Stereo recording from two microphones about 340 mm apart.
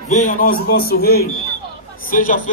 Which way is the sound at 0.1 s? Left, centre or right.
Left.